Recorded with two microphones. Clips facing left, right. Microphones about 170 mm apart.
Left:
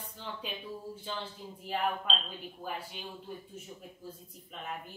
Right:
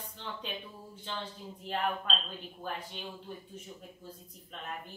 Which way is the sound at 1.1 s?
5° left (ahead or behind).